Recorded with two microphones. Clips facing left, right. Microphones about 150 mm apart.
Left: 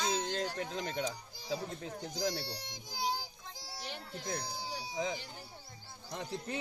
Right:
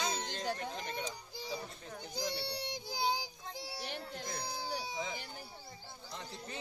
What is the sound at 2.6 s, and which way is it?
Child singing, 65° right (ahead or behind).